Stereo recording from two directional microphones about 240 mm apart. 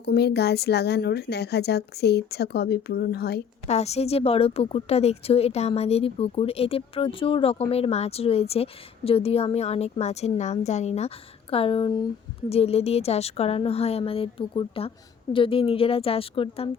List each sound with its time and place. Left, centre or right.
0.0 s speech: left
3.7 s a woman's voice: left